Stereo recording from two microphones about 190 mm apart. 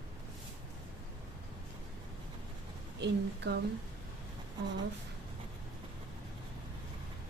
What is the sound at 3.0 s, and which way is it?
Speech, 65° right (ahead or behind).